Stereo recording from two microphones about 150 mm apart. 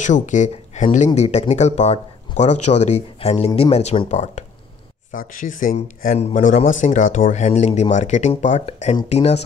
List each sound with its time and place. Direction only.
0.0 s speech: 55° left (ahead or behind)
5.1 s speech: 65° left (ahead or behind); by 9.4 s 45° left (ahead or behind)